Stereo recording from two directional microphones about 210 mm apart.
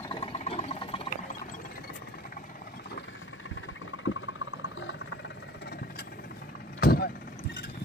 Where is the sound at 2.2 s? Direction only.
45° left (ahead or behind).